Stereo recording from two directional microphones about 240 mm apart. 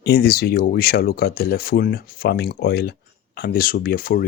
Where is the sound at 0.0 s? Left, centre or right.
Left.